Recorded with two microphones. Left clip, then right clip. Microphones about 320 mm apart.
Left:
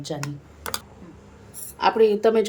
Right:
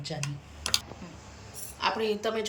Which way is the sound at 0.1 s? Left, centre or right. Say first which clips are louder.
Left 6 dB; centre.